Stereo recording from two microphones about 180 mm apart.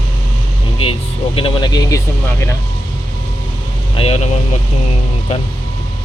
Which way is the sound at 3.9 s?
35° left (ahead or behind).